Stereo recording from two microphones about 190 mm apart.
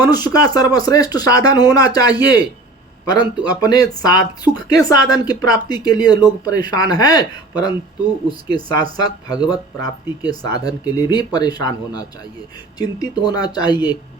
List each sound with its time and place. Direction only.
0.0 s speech: 20° left (ahead or behind)